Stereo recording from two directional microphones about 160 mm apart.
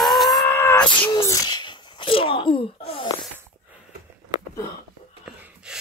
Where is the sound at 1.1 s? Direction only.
20° left (ahead or behind).